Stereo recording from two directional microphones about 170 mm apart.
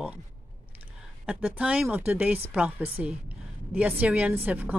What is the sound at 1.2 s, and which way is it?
A woman's voice, 10° right (ahead or behind).